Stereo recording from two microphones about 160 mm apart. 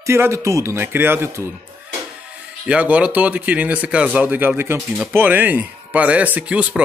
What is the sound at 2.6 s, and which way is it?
Speech, 10° right (ahead or behind).